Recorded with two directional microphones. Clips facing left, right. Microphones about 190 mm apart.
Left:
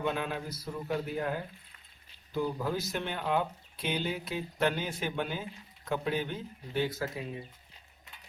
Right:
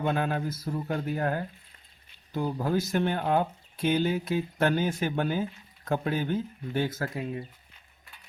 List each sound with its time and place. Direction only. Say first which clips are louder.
0.0 s speech: right 5 dB; 45° right (ahead or behind)